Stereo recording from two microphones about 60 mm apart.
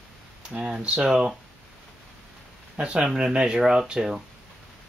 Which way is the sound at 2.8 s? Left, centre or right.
Centre.